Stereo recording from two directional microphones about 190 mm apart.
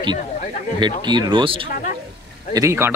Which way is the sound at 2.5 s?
15° right (ahead or behind).